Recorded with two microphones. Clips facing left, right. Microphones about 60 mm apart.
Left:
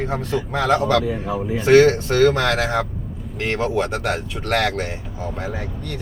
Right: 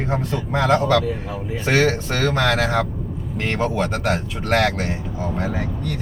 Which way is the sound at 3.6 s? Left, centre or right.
Centre.